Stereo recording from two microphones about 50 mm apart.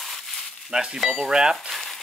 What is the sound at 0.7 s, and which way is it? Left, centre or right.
Speech, centre.